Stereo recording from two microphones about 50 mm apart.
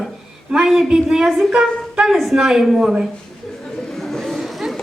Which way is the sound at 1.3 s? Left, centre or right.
Centre.